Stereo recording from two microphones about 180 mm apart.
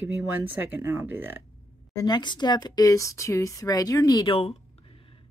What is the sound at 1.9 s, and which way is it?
Speech, 25° left (ahead or behind).